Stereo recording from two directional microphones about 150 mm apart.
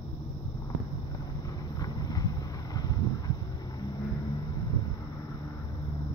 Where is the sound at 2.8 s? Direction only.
25° left (ahead or behind).